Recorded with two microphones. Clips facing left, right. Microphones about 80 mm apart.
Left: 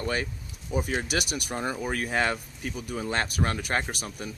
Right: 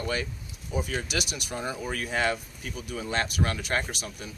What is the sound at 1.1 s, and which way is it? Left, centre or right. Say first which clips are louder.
Speech: left 2 dB; left.